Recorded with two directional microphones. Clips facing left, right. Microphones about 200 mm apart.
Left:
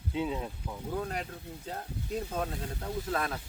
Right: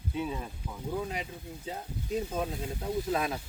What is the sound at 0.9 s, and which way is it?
Speech, 5° right (ahead or behind).